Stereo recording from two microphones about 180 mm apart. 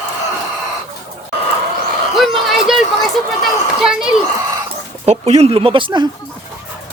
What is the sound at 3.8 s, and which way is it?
Speech, 5° right (ahead or behind).